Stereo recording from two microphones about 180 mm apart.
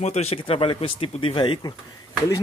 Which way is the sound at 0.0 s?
35° left (ahead or behind).